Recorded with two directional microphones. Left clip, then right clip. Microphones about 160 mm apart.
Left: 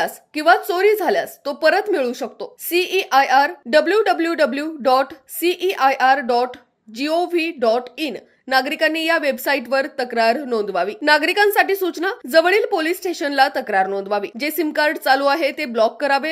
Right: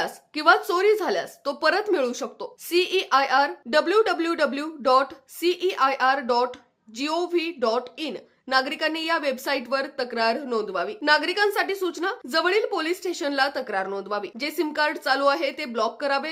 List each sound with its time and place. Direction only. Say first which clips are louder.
0.0 s speech: left 3 dB; 10° left (ahead or behind)